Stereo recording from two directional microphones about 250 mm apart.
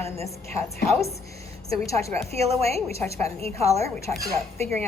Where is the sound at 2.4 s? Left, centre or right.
Right.